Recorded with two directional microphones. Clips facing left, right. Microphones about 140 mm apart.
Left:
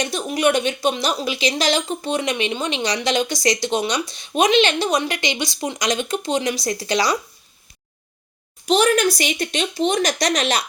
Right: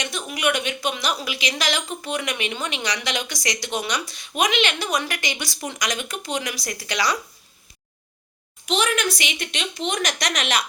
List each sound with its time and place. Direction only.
0.0 s a woman's voice: 35° left (ahead or behind)
8.6 s speech: 40° left (ahead or behind)